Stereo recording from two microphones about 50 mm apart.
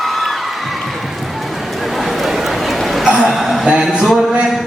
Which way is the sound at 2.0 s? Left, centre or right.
Centre.